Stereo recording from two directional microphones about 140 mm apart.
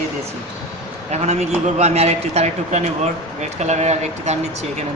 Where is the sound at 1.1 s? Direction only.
50° right (ahead or behind).